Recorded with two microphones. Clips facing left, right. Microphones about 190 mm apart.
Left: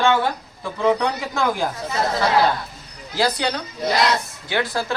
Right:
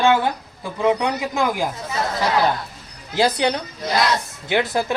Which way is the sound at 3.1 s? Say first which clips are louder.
Right 3 dB; 20° right (ahead or behind).